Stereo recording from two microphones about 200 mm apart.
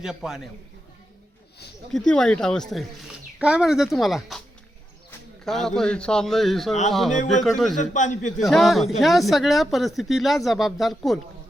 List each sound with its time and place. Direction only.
0.0 s speech: centre (ahead or behind)
1.9 s speech: centre (ahead or behind)
5.5 s speech: centre (ahead or behind)
7.1 s a man's voice: 40° left (ahead or behind)
7.4 s speech: centre (ahead or behind)
7.8 s a man's voice: 40° left (ahead or behind)
8.4 s speech: centre (ahead or behind)